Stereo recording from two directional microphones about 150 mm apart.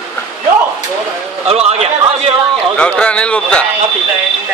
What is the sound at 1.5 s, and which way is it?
Speech, 45° right (ahead or behind).